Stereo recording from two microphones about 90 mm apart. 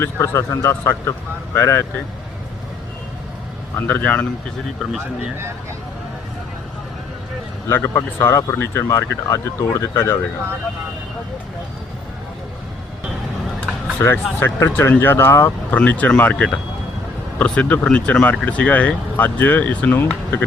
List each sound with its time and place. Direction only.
0.0 s speech: 30° left (ahead or behind)
3.8 s speech: 20° left (ahead or behind)
4.8 s speech: 5° right (ahead or behind)
7.7 s speech: 25° left (ahead or behind)
14.0 s speech: 30° left (ahead or behind)
15.7 s speech: 20° left (ahead or behind)